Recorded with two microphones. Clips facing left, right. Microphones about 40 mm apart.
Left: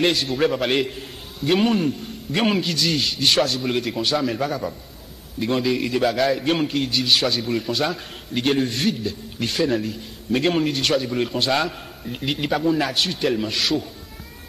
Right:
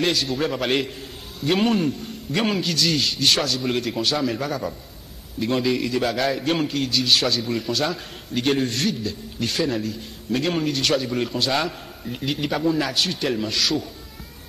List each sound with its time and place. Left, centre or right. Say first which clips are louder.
0.0 s a man's voice: left 3 dB; centre
9.8 s a man's voice: left 1 dB; left
10.7 s a man's voice: left 1 dB; centre
12.1 s a man's voice: left 2 dB; centre